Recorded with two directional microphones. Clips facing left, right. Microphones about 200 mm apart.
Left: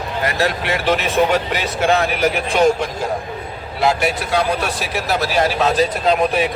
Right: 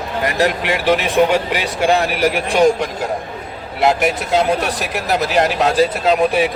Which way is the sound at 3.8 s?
20° right (ahead or behind).